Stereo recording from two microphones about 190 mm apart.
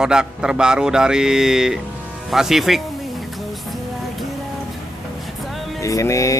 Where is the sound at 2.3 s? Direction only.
Centre (ahead or behind).